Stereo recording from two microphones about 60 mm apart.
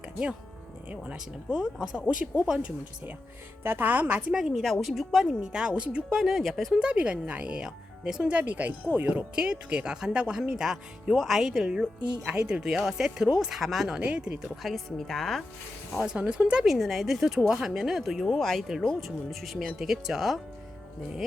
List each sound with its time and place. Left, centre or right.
1.1 s speech: centre
3.6 s speech: right
4.3 s speech: centre
6.1 s speech: centre
6.7 s speech: centre
14.4 s speech: centre
15.9 s speech: centre
16.1 s speech: centre
16.6 s speech: centre
18.3 s speech: centre